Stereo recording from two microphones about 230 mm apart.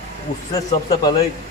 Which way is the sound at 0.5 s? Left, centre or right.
Centre.